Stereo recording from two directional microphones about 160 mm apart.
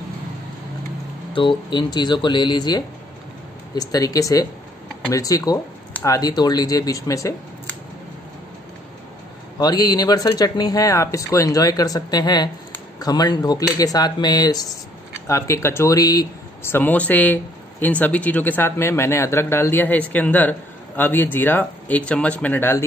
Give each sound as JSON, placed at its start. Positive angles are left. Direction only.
{"t": 1.3, "sound": "speech", "side_deg": 30}
{"t": 9.6, "sound": "speech", "side_deg": 25}